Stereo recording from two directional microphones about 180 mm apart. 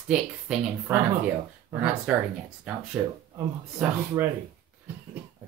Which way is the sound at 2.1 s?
5° right (ahead or behind).